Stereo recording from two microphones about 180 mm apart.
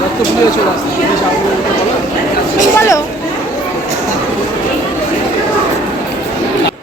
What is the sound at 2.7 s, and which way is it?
Speech, 15° left (ahead or behind).